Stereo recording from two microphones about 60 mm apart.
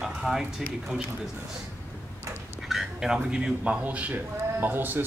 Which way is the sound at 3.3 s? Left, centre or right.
Centre.